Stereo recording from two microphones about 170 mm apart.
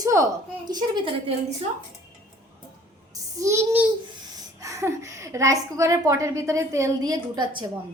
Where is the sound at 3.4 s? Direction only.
15° right (ahead or behind).